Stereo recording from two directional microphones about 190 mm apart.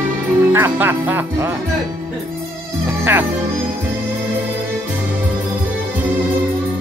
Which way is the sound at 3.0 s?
10° right (ahead or behind).